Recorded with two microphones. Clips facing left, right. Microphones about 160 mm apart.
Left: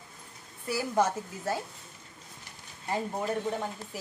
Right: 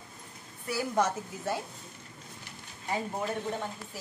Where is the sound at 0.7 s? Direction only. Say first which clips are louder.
Left 1 dB; centre (ahead or behind).